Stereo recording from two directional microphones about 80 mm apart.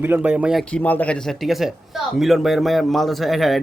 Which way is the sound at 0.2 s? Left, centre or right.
Centre.